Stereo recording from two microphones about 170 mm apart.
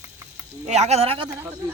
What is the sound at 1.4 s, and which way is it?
Speech, 10° right (ahead or behind).